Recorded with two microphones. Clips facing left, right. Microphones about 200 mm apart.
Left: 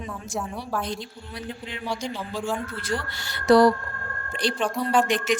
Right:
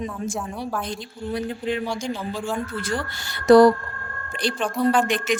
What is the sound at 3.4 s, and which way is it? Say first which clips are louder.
A woman's voice: right 4 dB; 50° right (ahead or behind).